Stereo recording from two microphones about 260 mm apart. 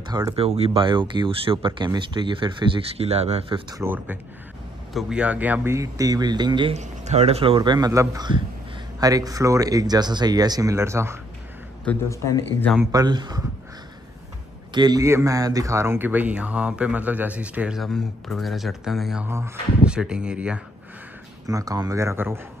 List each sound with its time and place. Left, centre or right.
0.1 s speech: centre
3.8 s speech: centre
11.8 s speech: centre
12.9 s speech: centre
14.7 s speech: centre